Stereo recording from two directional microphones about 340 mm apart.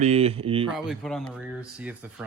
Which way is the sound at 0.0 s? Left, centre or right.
Centre.